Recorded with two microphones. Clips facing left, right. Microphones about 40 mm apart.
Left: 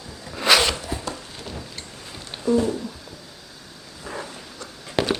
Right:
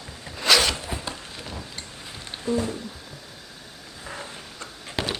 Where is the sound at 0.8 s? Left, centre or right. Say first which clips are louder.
Left 2 dB; right.